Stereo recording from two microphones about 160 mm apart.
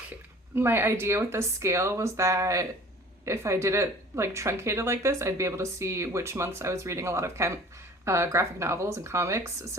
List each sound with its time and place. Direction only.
0.5 s speech: 15° right (ahead or behind)